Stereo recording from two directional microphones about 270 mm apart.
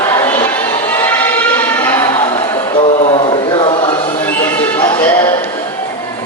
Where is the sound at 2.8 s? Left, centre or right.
Left.